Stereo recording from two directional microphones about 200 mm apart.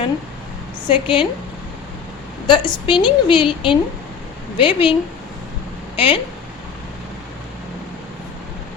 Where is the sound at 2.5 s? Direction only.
25° left (ahead or behind).